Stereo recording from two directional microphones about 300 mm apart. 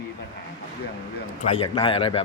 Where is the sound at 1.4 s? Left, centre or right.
Centre.